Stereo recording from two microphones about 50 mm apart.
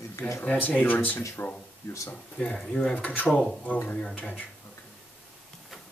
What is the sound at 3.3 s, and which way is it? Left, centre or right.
Speech, centre.